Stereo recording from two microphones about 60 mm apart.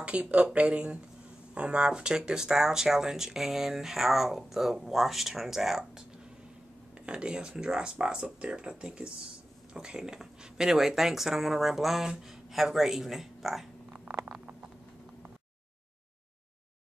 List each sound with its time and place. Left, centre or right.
0.0 s speech: centre
7.1 s speech: centre